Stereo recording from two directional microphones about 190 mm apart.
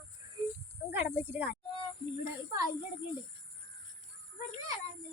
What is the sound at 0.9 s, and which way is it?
Speech, 10° right (ahead or behind).